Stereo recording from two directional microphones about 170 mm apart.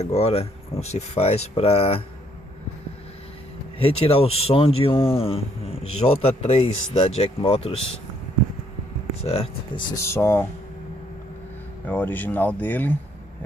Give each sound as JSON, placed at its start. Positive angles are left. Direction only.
{"t": 0.0, "sound": "speech", "side_deg": 40}
{"t": 3.8, "sound": "speech", "side_deg": 35}
{"t": 9.2, "sound": "speech", "side_deg": 35}
{"t": 9.9, "sound": "speech", "side_deg": 15}
{"t": 11.9, "sound": "speech", "side_deg": 10}